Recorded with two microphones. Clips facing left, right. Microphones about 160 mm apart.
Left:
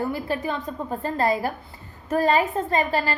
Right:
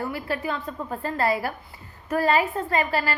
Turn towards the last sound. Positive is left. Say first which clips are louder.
# left 1 dB
turn(degrees=20)  # may be behind; listen again after turning